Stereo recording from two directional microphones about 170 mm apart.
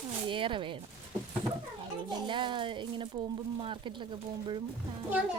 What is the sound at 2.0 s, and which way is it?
Speech, 30° right (ahead or behind).